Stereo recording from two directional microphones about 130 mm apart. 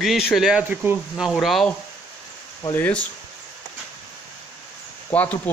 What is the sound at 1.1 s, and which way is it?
Speech, centre (ahead or behind).